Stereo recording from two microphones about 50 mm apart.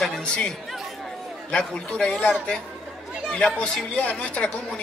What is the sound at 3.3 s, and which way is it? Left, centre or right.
Speech, centre.